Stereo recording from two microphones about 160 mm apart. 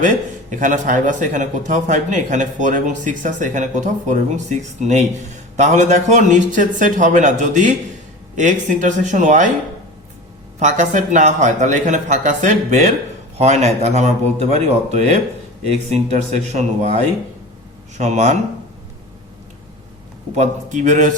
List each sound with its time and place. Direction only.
0.5 s speech: 50° right (ahead or behind)
10.6 s speech: 50° right (ahead or behind)
16.5 s speech: 45° right (ahead or behind)
20.3 s speech: 50° right (ahead or behind)